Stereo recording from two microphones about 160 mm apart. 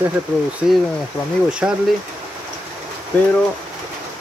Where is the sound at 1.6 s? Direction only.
5° right (ahead or behind).